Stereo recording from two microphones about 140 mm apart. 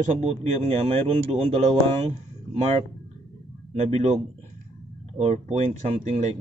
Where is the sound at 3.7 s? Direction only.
50° right (ahead or behind).